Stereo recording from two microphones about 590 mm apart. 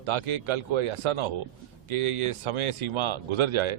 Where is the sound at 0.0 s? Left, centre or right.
Right.